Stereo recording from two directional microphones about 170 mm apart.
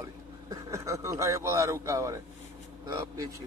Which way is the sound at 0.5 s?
20° right (ahead or behind).